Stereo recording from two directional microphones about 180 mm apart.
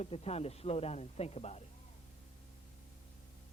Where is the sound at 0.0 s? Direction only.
35° left (ahead or behind).